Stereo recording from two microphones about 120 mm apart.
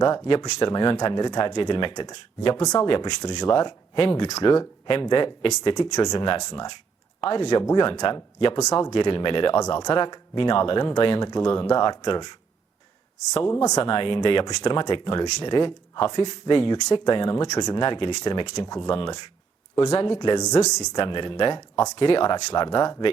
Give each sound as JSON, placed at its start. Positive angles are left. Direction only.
{"t": 0.0, "sound": "speech", "side_deg": 35}
{"t": 13.5, "sound": "speech", "side_deg": 30}
{"t": 13.8, "sound": "speech", "side_deg": 45}
{"t": 18.9, "sound": "speech", "side_deg": 45}